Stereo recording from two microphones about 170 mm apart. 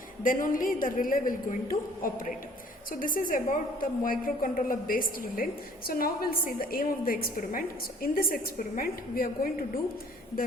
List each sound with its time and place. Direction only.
0.2 s a woman's voice: 55° left (ahead or behind)